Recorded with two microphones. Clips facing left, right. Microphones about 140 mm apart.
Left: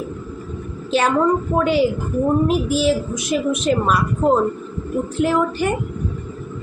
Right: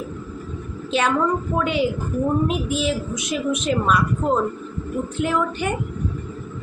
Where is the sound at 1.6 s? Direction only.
Centre (ahead or behind).